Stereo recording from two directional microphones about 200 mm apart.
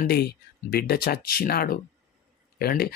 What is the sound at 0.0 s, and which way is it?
Speech, 50° left (ahead or behind).